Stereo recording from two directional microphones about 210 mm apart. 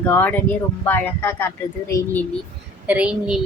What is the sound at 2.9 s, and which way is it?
Speech, 5° right (ahead or behind).